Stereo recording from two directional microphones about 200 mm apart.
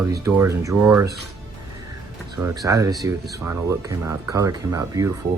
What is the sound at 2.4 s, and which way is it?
Speech, 15° right (ahead or behind).